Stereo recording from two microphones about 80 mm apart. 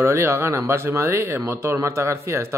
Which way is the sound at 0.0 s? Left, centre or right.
Right.